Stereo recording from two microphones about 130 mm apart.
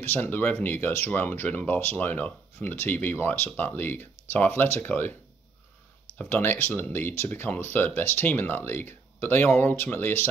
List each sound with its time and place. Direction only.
0.0 s speech: 15° left (ahead or behind)
6.1 s speech: 15° left (ahead or behind)